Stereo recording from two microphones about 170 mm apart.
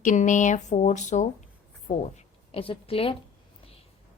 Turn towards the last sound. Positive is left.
turn(degrees=35)  # may be behind; listen again after turning